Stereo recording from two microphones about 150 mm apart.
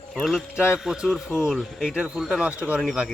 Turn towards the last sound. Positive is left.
turn(degrees=-5)  # may be behind; listen again after turning